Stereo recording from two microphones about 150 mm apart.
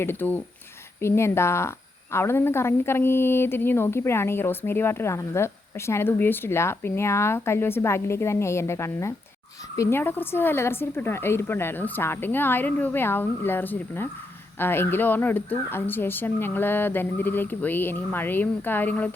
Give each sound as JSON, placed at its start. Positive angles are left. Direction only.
{"t": 0.0, "sound": "a woman's voice", "side_deg": 15}